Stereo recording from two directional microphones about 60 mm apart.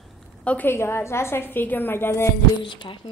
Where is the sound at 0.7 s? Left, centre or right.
Left.